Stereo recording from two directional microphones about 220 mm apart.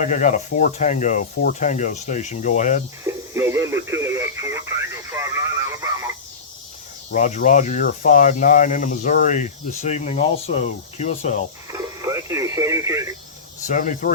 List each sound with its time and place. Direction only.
0.0 s speech: 35° left (ahead or behind)
3.3 s radio: 10° right (ahead or behind)
7.1 s speech: 35° left (ahead or behind)
11.7 s speech: 15° right (ahead or behind)
13.7 s speech: 35° left (ahead or behind)